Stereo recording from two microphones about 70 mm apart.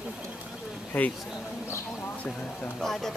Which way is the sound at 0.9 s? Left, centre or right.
Left.